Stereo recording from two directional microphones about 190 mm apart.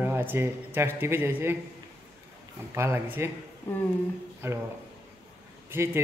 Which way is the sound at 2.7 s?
15° right (ahead or behind).